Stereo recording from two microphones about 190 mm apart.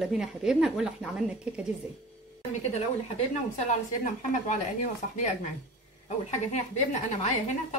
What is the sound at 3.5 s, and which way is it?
A woman's voice, 40° left (ahead or behind).